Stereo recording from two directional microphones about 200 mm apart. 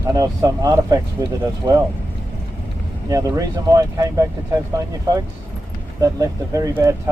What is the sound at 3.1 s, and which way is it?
Speech, 15° right (ahead or behind).